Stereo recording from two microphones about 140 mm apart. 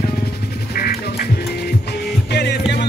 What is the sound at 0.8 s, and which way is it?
Music, 90° left.